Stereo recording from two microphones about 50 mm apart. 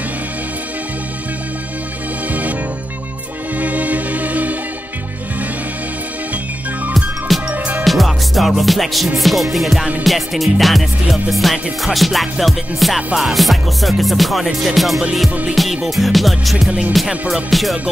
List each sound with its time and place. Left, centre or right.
3.5 s music: right
6.9 s music: centre